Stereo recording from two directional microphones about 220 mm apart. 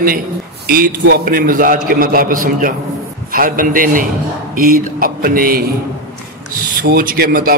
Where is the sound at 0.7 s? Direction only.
40° right (ahead or behind).